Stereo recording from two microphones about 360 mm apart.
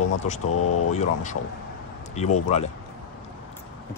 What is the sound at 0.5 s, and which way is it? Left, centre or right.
Speech, left.